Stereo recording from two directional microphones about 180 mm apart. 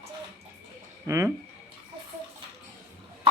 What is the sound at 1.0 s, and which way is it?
Speech, 15° right (ahead or behind).